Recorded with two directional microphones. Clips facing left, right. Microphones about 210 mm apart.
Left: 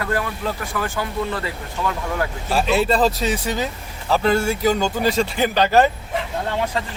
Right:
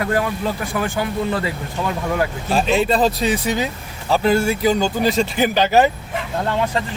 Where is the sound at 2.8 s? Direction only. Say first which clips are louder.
Left 1 dB; 15° right (ahead or behind).